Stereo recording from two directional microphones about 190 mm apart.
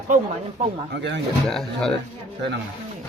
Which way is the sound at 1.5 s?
Centre (ahead or behind).